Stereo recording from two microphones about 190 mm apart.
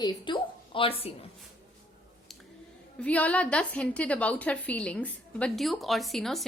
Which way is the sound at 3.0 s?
5° left (ahead or behind).